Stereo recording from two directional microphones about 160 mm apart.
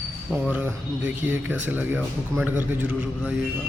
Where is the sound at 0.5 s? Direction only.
10° right (ahead or behind).